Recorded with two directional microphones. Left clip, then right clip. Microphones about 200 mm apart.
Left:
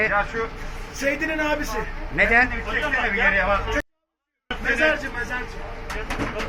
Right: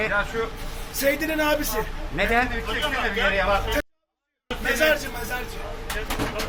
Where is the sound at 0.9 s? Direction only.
10° right (ahead or behind).